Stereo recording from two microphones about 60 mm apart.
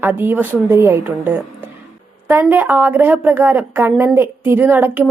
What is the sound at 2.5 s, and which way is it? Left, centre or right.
Speech, right.